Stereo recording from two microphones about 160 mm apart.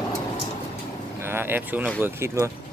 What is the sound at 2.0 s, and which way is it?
Speech, 15° right (ahead or behind).